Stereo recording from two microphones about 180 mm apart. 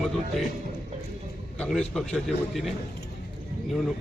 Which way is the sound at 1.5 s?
5° left (ahead or behind).